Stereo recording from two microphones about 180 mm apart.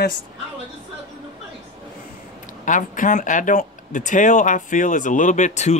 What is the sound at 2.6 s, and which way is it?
Speech, 45° left (ahead or behind).